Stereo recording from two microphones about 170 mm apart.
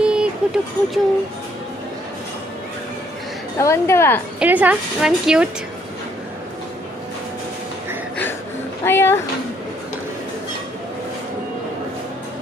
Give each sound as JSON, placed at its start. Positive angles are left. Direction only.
{"t": 0.0, "sound": "a sound", "side_deg": -5}
{"t": 3.5, "sound": "a woman's voice", "side_deg": 15}
{"t": 4.4, "sound": "a woman's voice", "side_deg": -10}
{"t": 8.8, "sound": "a woman's voice", "side_deg": 15}